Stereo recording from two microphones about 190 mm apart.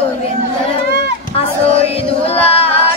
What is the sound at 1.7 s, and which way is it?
Chant, 30° left (ahead or behind).